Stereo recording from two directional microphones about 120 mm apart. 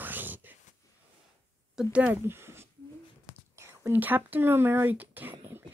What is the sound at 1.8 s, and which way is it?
Speech, 10° right (ahead or behind).